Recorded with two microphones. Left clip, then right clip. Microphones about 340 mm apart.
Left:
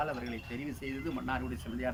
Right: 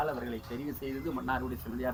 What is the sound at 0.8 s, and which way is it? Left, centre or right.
Speech, centre.